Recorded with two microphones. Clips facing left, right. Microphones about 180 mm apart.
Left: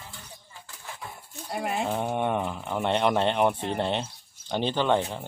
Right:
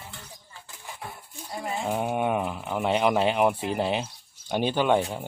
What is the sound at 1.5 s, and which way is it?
Speech, 65° left (ahead or behind).